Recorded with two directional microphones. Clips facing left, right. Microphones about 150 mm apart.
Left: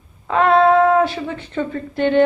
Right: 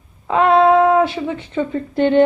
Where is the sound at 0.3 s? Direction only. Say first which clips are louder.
Right 1 dB; 15° right (ahead or behind).